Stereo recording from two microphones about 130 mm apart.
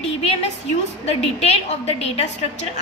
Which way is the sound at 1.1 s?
55° left (ahead or behind).